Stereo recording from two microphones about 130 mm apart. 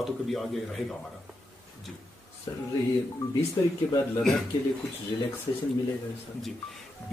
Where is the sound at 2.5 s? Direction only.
30° left (ahead or behind).